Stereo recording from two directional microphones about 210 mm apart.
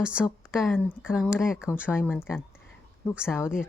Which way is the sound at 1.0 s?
5° right (ahead or behind).